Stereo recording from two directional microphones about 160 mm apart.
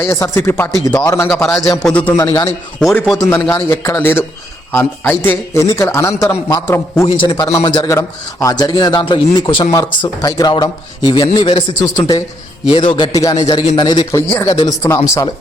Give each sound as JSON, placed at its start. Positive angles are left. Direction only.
{"t": 0.0, "sound": "a man's voice", "side_deg": 15}
{"t": 2.1, "sound": "speech", "side_deg": 20}
{"t": 2.8, "sound": "a man's voice", "side_deg": 0}
{"t": 3.2, "sound": "a man's voice", "side_deg": 10}
{"t": 7.2, "sound": "speech", "side_deg": 25}